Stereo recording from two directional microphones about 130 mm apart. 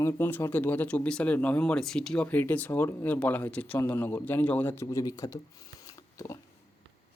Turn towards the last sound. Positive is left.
turn(degrees=25)  # may be behind; listen again after turning